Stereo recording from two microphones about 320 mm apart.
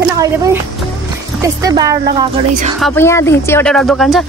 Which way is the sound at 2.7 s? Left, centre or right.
Centre.